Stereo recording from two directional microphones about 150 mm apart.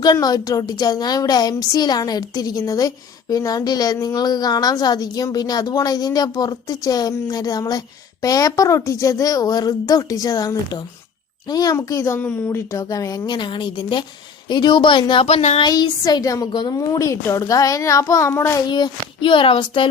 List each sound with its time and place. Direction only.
0.0 s a child's voice: 25° left (ahead or behind); by 15.6 s 45° left (ahead or behind)
15.6 s speech: 25° left (ahead or behind)
18.6 s a child's voice: 30° left (ahead or behind)